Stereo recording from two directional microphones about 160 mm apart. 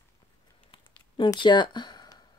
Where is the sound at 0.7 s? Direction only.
30° left (ahead or behind).